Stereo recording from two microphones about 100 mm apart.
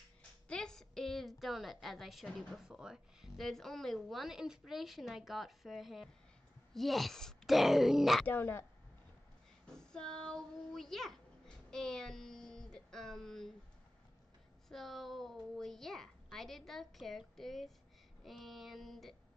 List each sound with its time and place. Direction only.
0.5 s a woman's voice: 5° left (ahead or behind)
8.3 s a woman's voice: 20° left (ahead or behind)
9.8 s a child's voice: 5° left (ahead or behind)
14.7 s a woman's voice: centre (ahead or behind)